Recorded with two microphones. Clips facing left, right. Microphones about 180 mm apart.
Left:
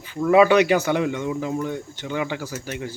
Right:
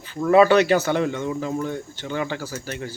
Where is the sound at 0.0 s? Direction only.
10° left (ahead or behind).